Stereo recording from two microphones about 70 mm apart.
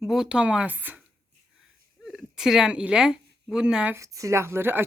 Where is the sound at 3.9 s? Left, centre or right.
Right.